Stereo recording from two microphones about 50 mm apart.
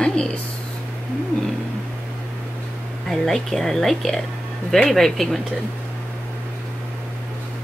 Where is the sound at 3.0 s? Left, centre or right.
Centre.